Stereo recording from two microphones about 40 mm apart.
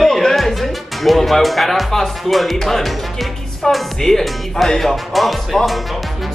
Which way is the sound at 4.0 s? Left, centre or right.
Centre.